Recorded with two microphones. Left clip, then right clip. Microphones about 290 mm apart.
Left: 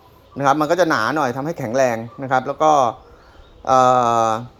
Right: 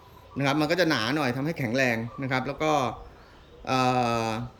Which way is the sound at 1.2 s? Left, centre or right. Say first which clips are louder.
Left 7 dB; centre.